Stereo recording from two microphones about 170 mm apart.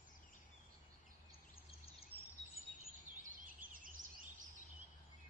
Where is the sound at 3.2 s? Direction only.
50° right (ahead or behind).